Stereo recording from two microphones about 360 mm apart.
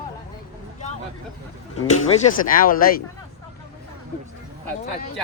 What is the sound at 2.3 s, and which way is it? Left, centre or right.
Speech, left.